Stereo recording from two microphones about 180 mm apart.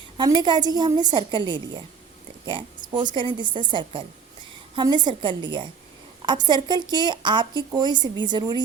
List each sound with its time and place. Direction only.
0.2 s a woman's voice: 25° right (ahead or behind)